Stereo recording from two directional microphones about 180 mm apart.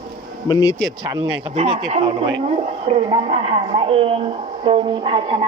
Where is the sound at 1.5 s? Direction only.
30° right (ahead or behind).